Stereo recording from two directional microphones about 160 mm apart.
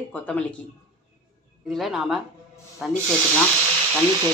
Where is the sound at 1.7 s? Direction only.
Centre (ahead or behind).